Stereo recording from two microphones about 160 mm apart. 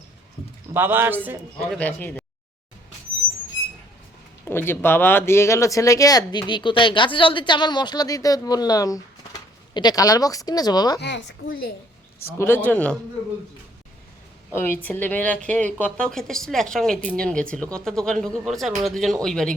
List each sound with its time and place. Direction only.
0.7 s a man's voice: 15° right (ahead or behind)
1.8 s a woman's voice: 10° left (ahead or behind)
4.4 s speech: 15° left (ahead or behind)
11.0 s speech: 90° left; by 11.7 s 70° left (ahead or behind)
12.2 s a woman's voice: 15° left (ahead or behind)
14.5 s a woman's voice: 15° left (ahead or behind)